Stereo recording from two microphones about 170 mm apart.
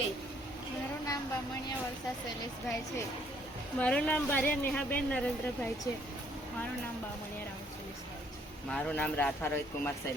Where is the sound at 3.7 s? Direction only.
10° left (ahead or behind).